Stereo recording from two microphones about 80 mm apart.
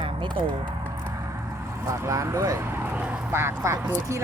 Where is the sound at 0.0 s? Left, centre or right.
Right.